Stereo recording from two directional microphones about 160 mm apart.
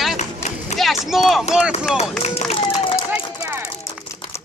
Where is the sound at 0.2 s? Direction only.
45° left (ahead or behind).